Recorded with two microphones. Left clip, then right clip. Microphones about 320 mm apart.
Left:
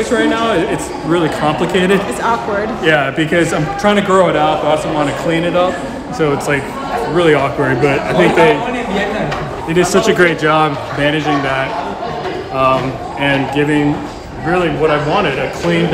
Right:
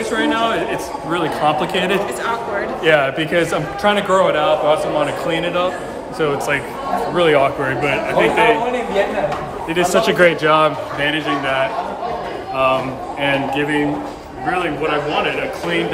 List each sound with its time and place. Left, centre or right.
0.1 s speech: centre
9.7 s speech: centre
11.0 s speech: centre
13.2 s speech: centre
14.5 s speech: centre